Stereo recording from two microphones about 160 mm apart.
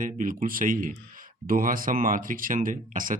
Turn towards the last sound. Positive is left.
turn(degrees=-55)  # may be behind; listen again after turning